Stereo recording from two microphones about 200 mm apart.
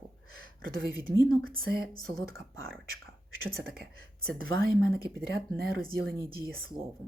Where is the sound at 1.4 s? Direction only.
50° right (ahead or behind).